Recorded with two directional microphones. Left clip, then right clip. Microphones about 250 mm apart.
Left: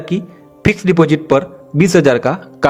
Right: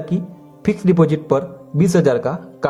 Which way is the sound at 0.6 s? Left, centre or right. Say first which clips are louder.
Left 4 dB; left.